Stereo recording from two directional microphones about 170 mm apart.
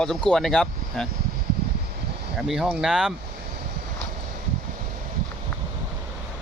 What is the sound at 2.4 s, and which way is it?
Speech, 5° right (ahead or behind).